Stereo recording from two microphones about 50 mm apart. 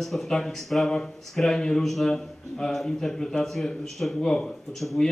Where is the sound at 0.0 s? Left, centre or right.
Centre.